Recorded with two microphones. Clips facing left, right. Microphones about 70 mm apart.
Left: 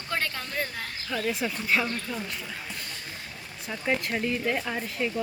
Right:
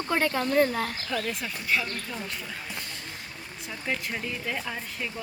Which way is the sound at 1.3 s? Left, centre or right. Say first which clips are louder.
Left 2 dB; centre.